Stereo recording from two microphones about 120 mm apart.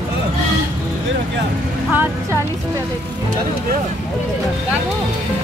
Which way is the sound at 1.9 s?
15° right (ahead or behind).